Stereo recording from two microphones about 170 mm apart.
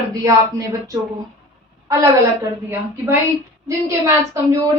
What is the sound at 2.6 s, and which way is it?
A woman's voice, 15° right (ahead or behind).